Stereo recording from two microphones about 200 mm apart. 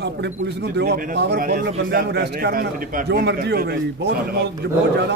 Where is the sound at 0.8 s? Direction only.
55° right (ahead or behind).